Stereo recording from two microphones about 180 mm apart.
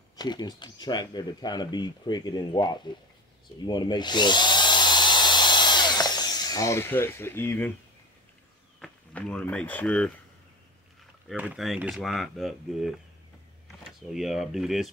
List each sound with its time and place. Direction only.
0.1 s speech: 25° left (ahead or behind)
3.5 s drill: 25° left (ahead or behind)
8.8 s speech: 5° left (ahead or behind)
11.2 s speech: 5° right (ahead or behind)